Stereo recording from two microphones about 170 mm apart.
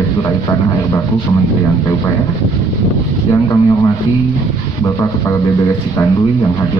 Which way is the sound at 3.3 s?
20° left (ahead or behind).